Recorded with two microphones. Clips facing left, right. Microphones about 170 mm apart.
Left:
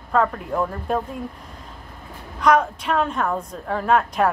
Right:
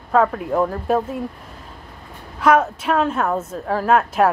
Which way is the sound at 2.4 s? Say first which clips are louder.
Right 2 dB; 5° right (ahead or behind).